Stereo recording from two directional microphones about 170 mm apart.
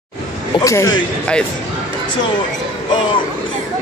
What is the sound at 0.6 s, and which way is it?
Speech, 20° left (ahead or behind).